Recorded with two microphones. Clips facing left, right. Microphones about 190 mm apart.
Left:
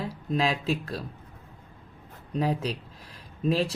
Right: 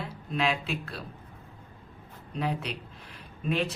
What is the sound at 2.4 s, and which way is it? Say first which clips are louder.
Speech: left 4 dB; 35° left (ahead or behind).